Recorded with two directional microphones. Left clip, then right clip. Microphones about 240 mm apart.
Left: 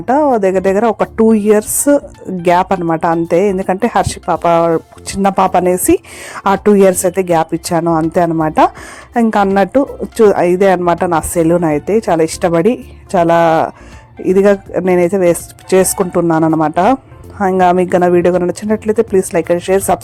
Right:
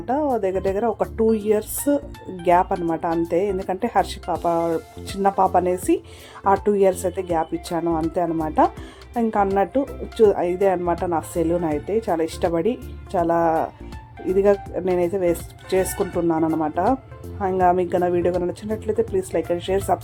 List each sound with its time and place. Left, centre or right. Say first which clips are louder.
0.0 s speech: left 11 dB; left